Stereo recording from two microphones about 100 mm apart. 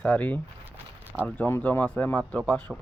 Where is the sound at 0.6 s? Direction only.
20° right (ahead or behind).